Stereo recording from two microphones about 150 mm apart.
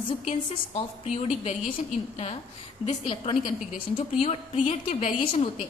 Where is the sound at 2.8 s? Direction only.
40° left (ahead or behind).